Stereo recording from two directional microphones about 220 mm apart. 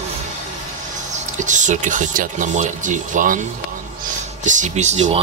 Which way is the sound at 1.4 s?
35° right (ahead or behind).